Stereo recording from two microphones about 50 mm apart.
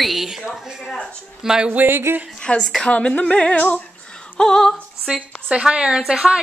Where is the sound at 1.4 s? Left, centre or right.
Centre.